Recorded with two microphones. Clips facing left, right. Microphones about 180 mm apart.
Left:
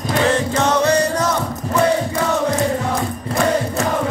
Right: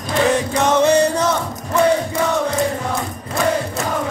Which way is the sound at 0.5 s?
20° right (ahead or behind).